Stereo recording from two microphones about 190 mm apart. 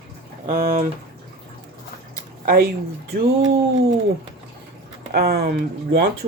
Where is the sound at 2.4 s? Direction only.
55° right (ahead or behind).